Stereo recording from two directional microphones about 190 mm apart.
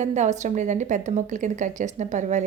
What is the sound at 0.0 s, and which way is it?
A woman's voice, 35° right (ahead or behind).